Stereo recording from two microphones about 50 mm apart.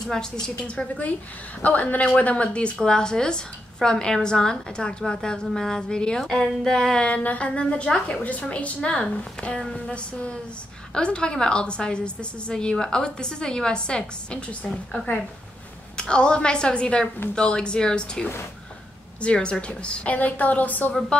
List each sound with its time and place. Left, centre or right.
0.1 s a woman's voice: centre
0.7 s a woman's voice: left
7.1 s a woman's voice: left
8.8 s a woman's voice: centre; by 20.9 s left
21.1 s a woman's voice: left